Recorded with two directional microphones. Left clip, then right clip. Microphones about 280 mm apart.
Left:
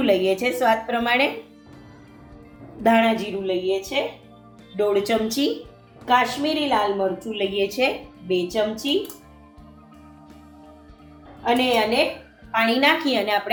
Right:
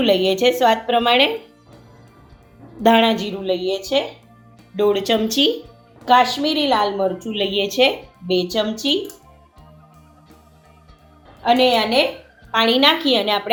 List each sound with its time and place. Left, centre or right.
0.0 s speech: right
2.8 s a woman's voice: right
11.4 s a woman's voice: right